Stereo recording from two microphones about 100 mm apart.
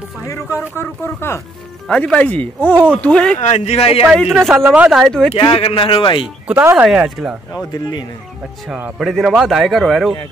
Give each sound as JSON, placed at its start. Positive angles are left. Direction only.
{"t": 0.3, "sound": "speech", "side_deg": 25}
{"t": 1.9, "sound": "speech", "side_deg": 10}
{"t": 3.6, "sound": "speech", "side_deg": 85}
{"t": 4.1, "sound": "a man's voice", "side_deg": 0}
{"t": 4.6, "sound": "speech", "side_deg": -15}
{"t": 4.9, "sound": "a man's voice", "side_deg": 0}
{"t": 5.5, "sound": "speech", "side_deg": 70}
{"t": 6.6, "sound": "speech", "side_deg": -15}
{"t": 6.9, "sound": "speech", "side_deg": -5}
{"t": 8.6, "sound": "speech", "side_deg": -15}
{"t": 9.0, "sound": "a man's voice", "side_deg": -5}